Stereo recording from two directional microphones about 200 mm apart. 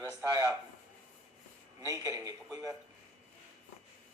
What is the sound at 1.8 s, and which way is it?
Speech, 15° right (ahead or behind).